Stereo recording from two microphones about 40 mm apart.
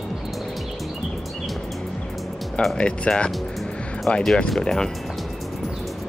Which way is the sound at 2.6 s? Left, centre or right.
Left.